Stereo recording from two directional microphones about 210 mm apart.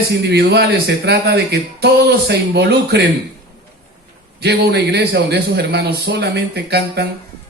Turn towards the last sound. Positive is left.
turn(degrees=-50)  # may be behind; listen again after turning